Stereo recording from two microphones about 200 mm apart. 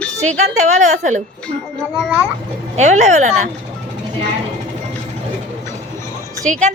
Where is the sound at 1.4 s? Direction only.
Centre (ahead or behind).